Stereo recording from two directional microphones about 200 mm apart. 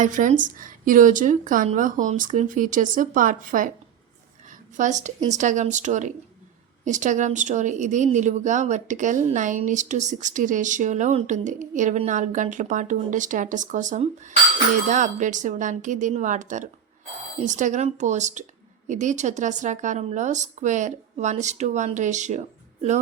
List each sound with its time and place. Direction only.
0.0 s speech: 40° right (ahead or behind)